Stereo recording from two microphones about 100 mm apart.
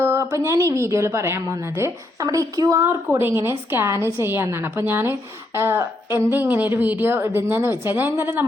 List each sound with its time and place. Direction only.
0.0 s a woman's voice: 25° right (ahead or behind)
2.8 s a woman's voice: 20° right (ahead or behind)